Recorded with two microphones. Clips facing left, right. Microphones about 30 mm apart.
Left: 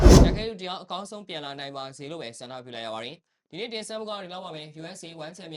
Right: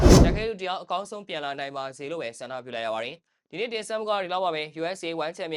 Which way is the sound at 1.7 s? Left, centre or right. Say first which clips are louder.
Right 4 dB; left.